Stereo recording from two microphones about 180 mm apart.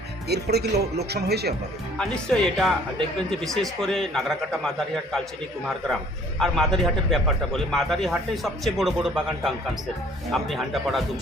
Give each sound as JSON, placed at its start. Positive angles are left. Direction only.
{"t": 0.3, "sound": "speech", "side_deg": -65}
{"t": 2.0, "sound": "a man's voice", "side_deg": 5}
{"t": 6.4, "sound": "a man's voice", "side_deg": 0}